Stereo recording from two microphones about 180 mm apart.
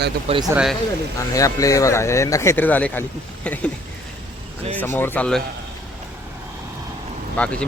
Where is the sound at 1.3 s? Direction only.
20° left (ahead or behind).